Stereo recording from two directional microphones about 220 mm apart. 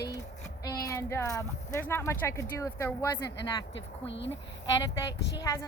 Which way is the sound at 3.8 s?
55° left (ahead or behind).